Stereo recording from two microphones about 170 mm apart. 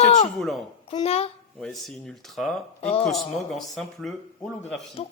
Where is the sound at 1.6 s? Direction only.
Centre (ahead or behind).